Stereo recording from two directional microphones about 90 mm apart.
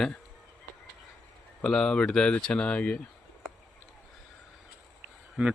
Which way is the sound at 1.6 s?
10° left (ahead or behind).